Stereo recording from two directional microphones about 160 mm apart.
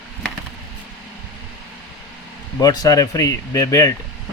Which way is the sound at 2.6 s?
25° left (ahead or behind).